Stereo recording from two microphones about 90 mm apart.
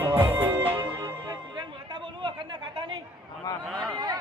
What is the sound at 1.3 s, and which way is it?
Music, 55° right (ahead or behind).